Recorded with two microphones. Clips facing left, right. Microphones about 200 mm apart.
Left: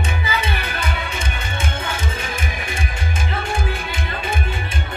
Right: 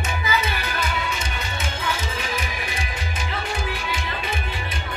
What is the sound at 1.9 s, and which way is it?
Music, 55° left (ahead or behind).